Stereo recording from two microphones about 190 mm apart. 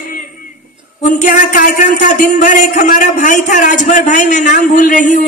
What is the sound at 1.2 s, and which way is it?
A man's voice, 40° left (ahead or behind).